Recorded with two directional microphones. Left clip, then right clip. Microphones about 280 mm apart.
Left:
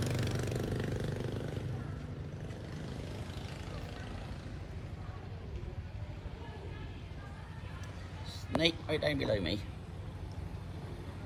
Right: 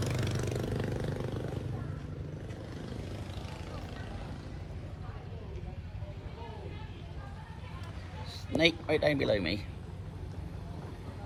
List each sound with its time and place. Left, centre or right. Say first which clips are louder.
0.0 s vehicle: right 2 dB; right
8.5 s speech: right 4 dB; centre